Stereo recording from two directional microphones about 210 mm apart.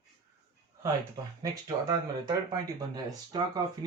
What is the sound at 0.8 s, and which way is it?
Speech, 15° right (ahead or behind).